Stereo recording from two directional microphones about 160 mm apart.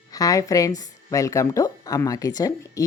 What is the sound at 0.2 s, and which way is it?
Speech, 20° left (ahead or behind).